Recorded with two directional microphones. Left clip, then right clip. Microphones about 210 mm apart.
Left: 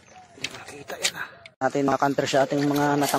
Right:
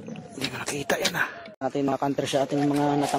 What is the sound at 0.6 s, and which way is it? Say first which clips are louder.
Speech: right 5 dB; 45° right (ahead or behind).